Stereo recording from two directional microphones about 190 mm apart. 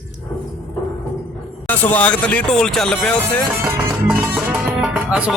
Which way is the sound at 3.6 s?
5° right (ahead or behind).